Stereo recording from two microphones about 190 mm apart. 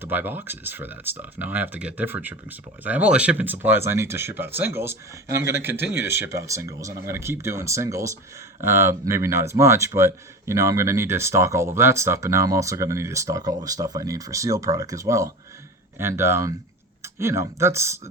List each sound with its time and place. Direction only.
0.0 s speech: 10° right (ahead or behind)